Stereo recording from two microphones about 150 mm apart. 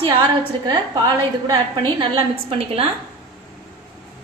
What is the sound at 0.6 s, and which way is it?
A woman's voice, 25° right (ahead or behind).